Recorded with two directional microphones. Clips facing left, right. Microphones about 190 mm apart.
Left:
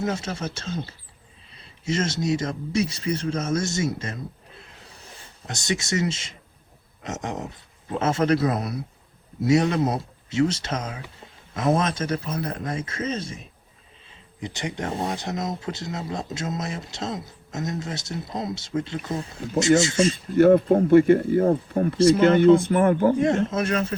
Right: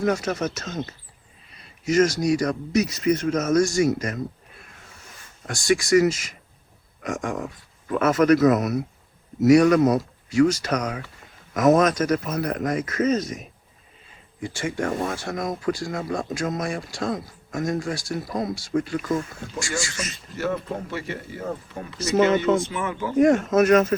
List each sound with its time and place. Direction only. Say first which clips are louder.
0.0 s speech: right 4 dB; 25° left (ahead or behind)
20.3 s speech: left 12 dB; 55° left (ahead or behind)
23.2 s speech: right 5 dB; 25° left (ahead or behind)